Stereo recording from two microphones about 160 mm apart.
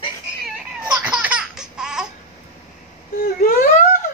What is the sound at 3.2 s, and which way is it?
Wail, 65° left (ahead or behind).